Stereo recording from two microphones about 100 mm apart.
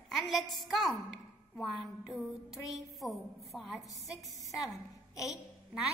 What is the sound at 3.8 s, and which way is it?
Speech, 35° left (ahead or behind).